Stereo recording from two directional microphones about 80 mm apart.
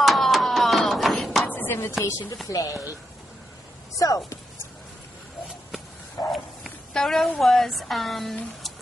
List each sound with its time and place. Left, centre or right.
0.0 s a sound: centre
1.5 s chopping: left
2.4 s speech: left
4.0 s speech: left
6.9 s a woman's voice: centre